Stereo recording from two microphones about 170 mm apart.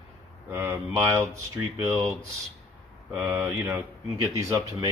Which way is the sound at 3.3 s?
20° right (ahead or behind).